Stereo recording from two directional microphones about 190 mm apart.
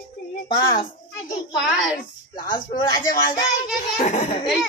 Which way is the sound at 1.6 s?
Centre (ahead or behind).